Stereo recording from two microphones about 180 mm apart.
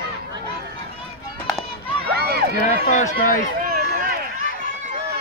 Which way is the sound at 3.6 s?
55° right (ahead or behind).